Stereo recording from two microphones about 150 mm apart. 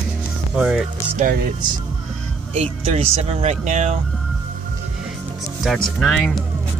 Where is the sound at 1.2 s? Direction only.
70° right (ahead or behind).